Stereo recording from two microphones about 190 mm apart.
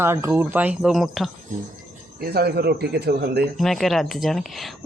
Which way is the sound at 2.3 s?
55° right (ahead or behind).